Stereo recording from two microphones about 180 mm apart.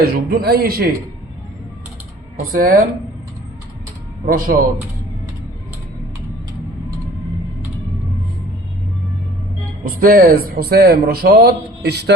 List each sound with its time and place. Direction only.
0.0 s speech: 60° right (ahead or behind)
2.5 s speech: 50° right (ahead or behind)
4.3 s speech: 50° right (ahead or behind)
9.8 s speech: 50° right (ahead or behind); by 12.1 s 65° right (ahead or behind)